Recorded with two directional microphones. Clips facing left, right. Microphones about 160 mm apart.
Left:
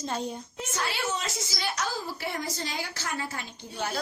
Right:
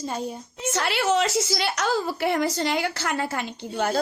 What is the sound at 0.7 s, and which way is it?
A woman's voice, 80° right.